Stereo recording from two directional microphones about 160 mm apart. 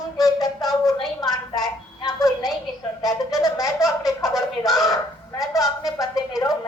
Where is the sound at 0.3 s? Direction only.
25° left (ahead or behind).